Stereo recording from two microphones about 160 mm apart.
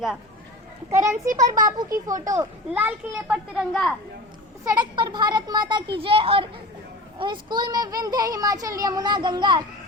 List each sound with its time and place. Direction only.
0.9 s a child's voice: 20° right (ahead or behind); by 3.9 s centre (ahead or behind)
4.6 s a child's voice: 25° right (ahead or behind)